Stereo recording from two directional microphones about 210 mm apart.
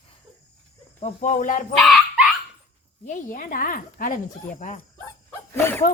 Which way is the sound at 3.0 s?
40° left (ahead or behind).